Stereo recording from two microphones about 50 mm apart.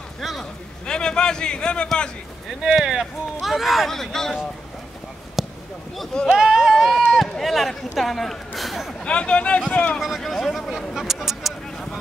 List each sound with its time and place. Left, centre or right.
0.2 s a sound: centre
0.8 s speech: centre
2.6 s speech: centre
5.4 s basketball bounce: centre
6.3 s speech: centre
7.1 s a sound: centre
9.0 s speech: left
9.9 s speech: centre
11.0 s a sound: centre